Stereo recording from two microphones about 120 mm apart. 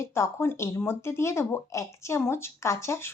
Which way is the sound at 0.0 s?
20° left (ahead or behind).